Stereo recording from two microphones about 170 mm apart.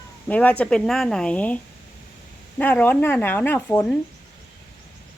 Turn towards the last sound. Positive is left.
turn(degrees=10)  # may be behind; listen again after turning